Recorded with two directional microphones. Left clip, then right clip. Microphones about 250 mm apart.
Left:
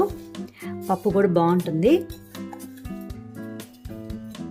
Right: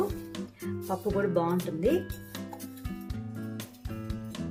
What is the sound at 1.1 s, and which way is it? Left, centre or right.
Speech, left.